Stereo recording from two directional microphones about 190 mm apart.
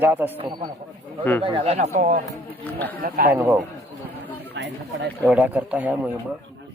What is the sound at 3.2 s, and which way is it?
Speech, 10° right (ahead or behind).